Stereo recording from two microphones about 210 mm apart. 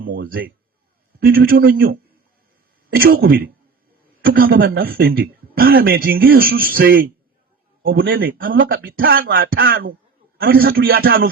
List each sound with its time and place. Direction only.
0.1 s a man's voice: 45° right (ahead or behind)